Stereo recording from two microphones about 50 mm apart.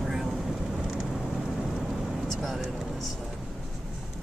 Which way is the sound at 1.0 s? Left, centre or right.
Centre.